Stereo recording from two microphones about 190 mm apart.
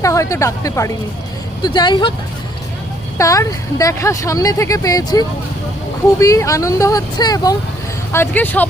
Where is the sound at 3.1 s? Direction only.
15° left (ahead or behind).